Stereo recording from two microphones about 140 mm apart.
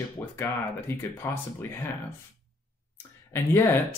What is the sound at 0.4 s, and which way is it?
Speech, 15° left (ahead or behind).